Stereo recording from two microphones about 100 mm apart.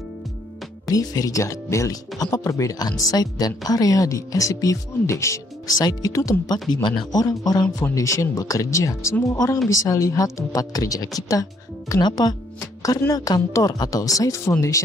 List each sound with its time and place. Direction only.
0.8 s speech: 35° left (ahead or behind)